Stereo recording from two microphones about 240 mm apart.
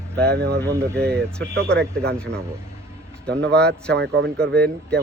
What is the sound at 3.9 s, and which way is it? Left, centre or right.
Speech, right.